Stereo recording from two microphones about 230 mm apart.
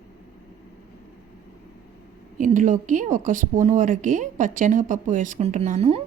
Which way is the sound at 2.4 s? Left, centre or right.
Right.